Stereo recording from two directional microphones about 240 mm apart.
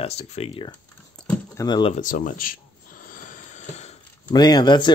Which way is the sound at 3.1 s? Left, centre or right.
Left.